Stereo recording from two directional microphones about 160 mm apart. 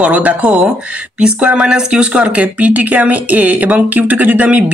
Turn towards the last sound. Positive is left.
turn(degrees=-10)  # may be behind; listen again after turning